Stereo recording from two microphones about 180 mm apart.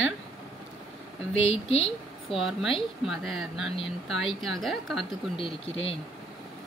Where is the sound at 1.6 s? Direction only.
30° left (ahead or behind).